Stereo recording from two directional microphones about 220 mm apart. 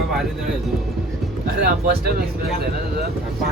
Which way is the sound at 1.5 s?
45° right (ahead or behind).